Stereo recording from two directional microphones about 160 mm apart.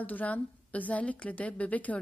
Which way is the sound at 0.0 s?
10° left (ahead or behind).